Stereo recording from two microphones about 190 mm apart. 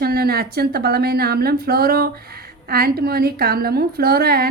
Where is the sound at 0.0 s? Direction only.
55° right (ahead or behind).